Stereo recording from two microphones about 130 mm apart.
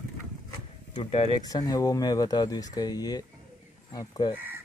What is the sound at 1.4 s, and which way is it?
Speech, 30° left (ahead or behind).